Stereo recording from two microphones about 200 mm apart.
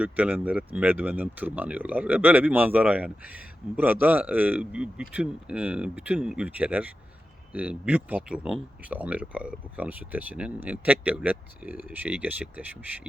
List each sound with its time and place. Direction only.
0.0 s speech: 5° right (ahead or behind)